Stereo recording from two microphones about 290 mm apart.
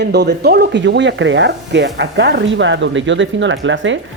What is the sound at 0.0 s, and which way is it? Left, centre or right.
Speech, right.